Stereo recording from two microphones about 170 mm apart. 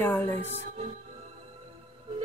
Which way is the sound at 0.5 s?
40° right (ahead or behind).